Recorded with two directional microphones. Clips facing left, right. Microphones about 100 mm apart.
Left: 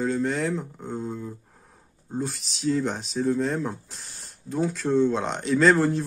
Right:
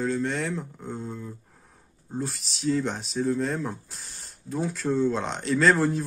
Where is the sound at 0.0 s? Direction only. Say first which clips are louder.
Left 2 dB; centre (ahead or behind).